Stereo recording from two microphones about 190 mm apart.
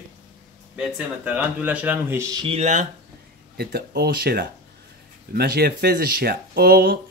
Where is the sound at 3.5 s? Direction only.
55° right (ahead or behind).